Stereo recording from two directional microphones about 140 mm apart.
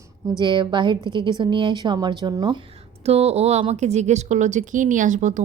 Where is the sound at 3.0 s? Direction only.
50° right (ahead or behind).